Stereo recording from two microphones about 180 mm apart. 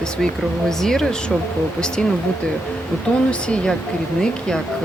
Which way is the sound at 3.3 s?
5° left (ahead or behind).